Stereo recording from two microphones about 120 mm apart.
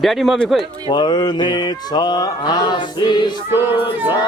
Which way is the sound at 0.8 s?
40° left (ahead or behind).